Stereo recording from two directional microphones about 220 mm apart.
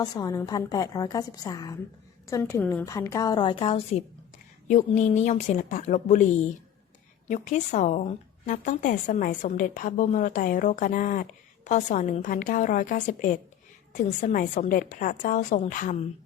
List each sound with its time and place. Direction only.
0.0 s a woman's voice: 15° left (ahead or behind); by 6.2 s 35° left (ahead or behind)
7.3 s a woman's voice: 35° left (ahead or behind)